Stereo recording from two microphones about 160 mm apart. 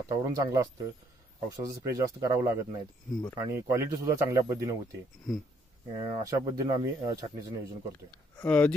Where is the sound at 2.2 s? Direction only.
20° right (ahead or behind).